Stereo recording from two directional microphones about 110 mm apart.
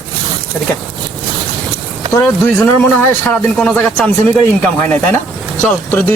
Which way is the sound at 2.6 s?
15° left (ahead or behind).